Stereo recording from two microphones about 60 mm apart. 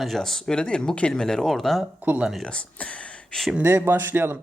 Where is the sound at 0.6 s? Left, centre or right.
Centre.